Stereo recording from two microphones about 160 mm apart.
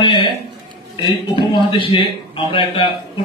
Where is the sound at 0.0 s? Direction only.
30° left (ahead or behind).